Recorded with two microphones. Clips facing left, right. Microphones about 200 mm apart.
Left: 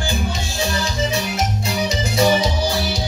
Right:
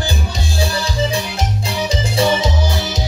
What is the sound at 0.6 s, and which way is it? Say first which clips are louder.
Music: right 2 dB; 35° right (ahead or behind).